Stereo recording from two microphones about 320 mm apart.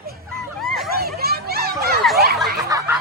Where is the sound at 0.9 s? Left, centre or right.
Right.